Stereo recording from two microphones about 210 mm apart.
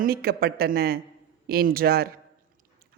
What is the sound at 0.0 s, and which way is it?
Speech, 45° right (ahead or behind).